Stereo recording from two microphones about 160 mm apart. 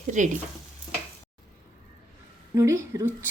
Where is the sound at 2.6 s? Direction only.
20° right (ahead or behind).